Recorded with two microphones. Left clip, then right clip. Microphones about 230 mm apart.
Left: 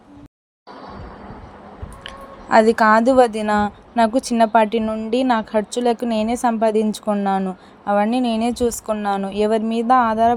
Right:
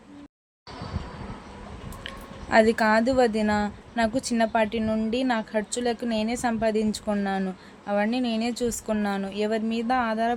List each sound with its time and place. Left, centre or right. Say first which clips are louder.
2.0 s a woman's voice: left 8 dB; centre